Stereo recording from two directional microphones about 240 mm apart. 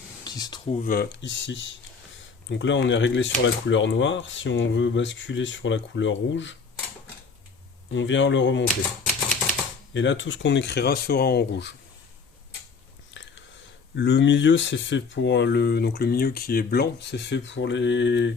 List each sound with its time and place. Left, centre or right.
0.3 s speech: centre
0.7 s speech: left
7.9 s speech: left
9.9 s speech: left
13.2 s biting: left
13.9 s speech: left